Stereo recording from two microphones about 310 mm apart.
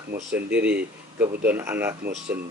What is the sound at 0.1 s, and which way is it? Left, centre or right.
Speech, right.